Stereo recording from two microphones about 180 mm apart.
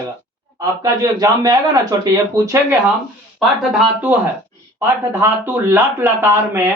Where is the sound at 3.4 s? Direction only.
5° right (ahead or behind).